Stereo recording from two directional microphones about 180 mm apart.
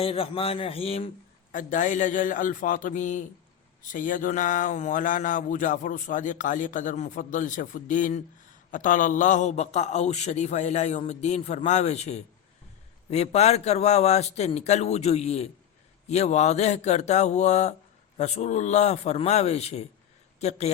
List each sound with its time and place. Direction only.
0.0 s a man's voice: 30° left (ahead or behind)
1.5 s a man's voice: 45° left (ahead or behind)